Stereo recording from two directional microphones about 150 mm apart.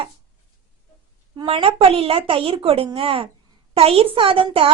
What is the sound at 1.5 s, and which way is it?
Speech, 40° right (ahead or behind).